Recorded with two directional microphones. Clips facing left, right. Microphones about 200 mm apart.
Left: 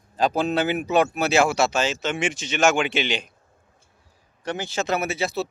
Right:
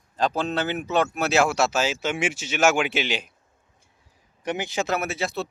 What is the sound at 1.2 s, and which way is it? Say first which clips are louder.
Speech: left 1 dB; centre (ahead or behind).